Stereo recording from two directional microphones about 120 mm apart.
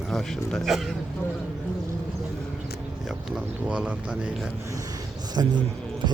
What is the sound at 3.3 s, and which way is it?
Speech, 10° right (ahead or behind).